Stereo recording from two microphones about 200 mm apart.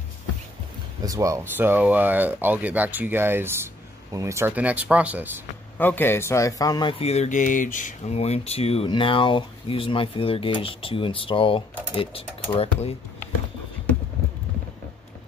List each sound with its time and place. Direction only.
1.0 s speech: 15° right (ahead or behind)
5.8 s speech: 10° left (ahead or behind); by 12.9 s 30° left (ahead or behind)